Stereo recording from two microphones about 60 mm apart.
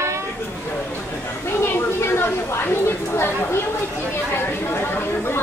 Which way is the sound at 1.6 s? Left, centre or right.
Left.